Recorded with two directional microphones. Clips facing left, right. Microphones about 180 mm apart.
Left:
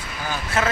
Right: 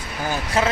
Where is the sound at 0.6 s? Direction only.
30° right (ahead or behind).